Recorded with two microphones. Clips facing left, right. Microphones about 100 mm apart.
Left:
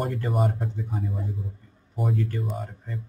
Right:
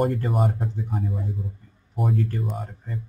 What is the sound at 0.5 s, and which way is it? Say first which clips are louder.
Speech: right 2 dB; 60° right (ahead or behind).